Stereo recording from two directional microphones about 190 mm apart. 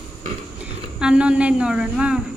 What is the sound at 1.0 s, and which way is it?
A woman's voice, 5° right (ahead or behind).